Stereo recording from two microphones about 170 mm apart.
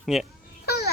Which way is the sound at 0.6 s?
65° left (ahead or behind).